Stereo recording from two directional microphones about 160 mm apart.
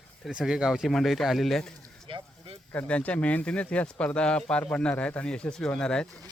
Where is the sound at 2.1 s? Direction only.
35° right (ahead or behind).